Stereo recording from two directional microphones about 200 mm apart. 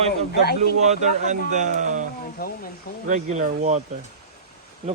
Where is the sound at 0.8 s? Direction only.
35° right (ahead or behind).